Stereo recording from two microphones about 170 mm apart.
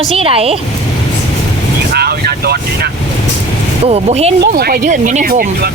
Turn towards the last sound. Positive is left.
turn(degrees=-60)  # may be behind; listen again after turning